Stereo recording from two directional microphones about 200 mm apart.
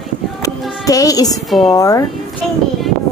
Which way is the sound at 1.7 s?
20° left (ahead or behind).